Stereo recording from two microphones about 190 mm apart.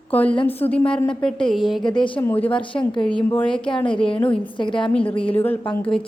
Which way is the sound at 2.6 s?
25° left (ahead or behind).